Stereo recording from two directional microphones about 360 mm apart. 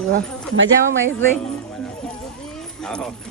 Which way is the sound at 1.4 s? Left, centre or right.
Centre.